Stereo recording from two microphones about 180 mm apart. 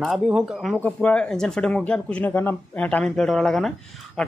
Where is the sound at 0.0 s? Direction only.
5° right (ahead or behind).